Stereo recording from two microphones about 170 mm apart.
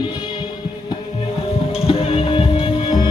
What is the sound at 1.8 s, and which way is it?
Music, 35° left (ahead or behind).